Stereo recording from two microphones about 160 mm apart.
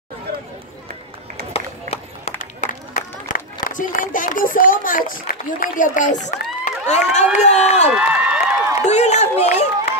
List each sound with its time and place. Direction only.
1.5 s run: 40° left (ahead or behind)
2.6 s run: 50° left (ahead or behind)
3.6 s speech: 55° left (ahead or behind)
7.9 s a sound: 5° right (ahead or behind)
8.7 s speech: 45° left (ahead or behind)